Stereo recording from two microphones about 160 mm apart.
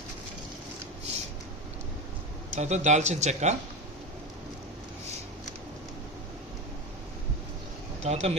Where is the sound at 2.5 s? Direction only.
45° right (ahead or behind).